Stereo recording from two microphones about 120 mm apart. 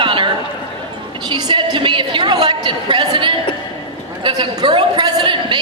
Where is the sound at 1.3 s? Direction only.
40° right (ahead or behind).